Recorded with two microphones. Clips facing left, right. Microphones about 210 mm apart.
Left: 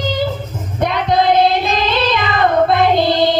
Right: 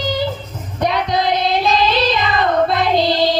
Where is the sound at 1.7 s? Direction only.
55° left (ahead or behind).